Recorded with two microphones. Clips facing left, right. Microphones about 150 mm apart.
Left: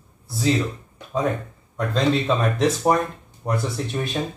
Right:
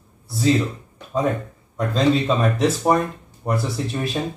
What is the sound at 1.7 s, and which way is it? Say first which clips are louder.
Speech: right 2 dB; centre (ahead or behind).